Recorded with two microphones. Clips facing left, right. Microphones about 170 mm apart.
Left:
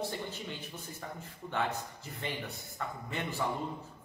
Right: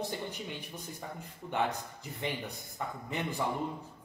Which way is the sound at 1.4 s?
15° right (ahead or behind).